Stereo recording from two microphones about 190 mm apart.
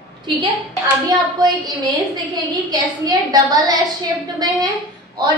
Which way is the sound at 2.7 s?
20° right (ahead or behind).